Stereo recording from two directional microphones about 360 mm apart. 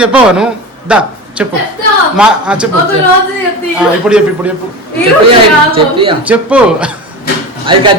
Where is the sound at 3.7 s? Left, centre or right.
Centre.